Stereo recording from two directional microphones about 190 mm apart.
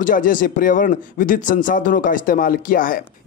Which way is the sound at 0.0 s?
45° left (ahead or behind).